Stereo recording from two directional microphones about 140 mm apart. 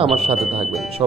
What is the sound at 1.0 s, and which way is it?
Speech, 30° right (ahead or behind).